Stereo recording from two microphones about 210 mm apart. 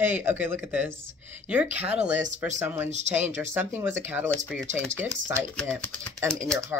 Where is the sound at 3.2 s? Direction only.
10° right (ahead or behind).